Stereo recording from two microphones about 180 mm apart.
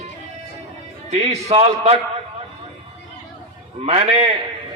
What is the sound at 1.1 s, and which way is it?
Speech, 40° right (ahead or behind).